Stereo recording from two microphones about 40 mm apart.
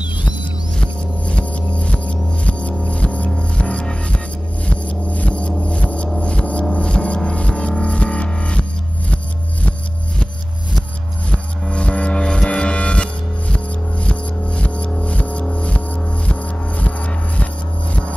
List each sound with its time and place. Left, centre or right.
0.7 s music: left
4.6 s gong: left
7.2 s music: left
11.6 s music: left